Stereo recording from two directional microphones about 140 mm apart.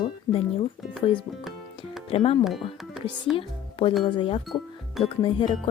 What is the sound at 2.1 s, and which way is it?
Speech, 40° left (ahead or behind).